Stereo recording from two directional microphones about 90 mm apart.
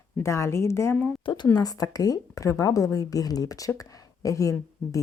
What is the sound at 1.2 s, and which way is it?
Speech, 60° left (ahead or behind).